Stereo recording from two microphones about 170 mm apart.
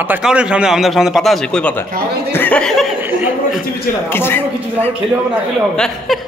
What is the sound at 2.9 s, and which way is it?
Speech, 10° right (ahead or behind).